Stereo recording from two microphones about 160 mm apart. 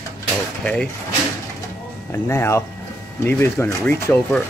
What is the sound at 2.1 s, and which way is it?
Speech, 15° left (ahead or behind).